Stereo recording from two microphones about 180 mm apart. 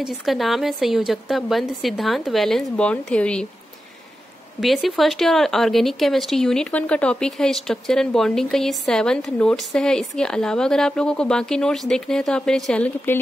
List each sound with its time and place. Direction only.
0.0 s speech: centre (ahead or behind)
4.6 s speech: centre (ahead or behind)